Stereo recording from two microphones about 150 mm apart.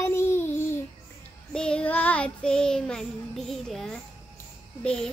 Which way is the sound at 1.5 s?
5° left (ahead or behind).